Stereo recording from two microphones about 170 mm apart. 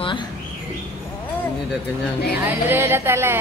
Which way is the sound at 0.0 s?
30° left (ahead or behind).